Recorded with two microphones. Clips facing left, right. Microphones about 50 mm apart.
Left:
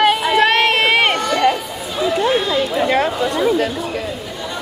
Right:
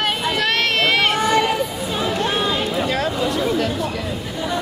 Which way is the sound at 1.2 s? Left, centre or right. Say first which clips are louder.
Right 1 dB; centre.